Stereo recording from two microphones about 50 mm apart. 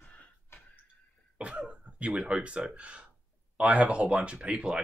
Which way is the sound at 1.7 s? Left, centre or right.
Right.